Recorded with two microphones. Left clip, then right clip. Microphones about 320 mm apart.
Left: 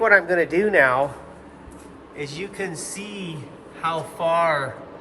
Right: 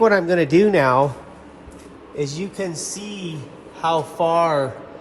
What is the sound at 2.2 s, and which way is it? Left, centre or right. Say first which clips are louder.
Speech: right 3 dB; centre.